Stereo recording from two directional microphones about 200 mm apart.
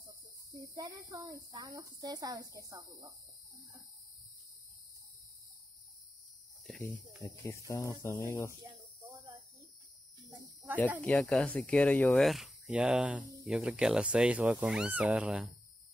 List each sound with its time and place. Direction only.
1.5 s speech: 20° right (ahead or behind)
7.2 s speech: 15° left (ahead or behind)
11.0 s speech: 5° left (ahead or behind)